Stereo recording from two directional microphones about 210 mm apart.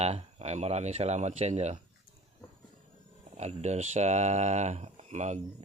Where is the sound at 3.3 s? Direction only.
30° right (ahead or behind).